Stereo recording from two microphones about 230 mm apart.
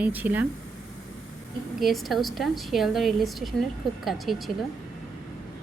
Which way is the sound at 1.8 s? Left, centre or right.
Centre.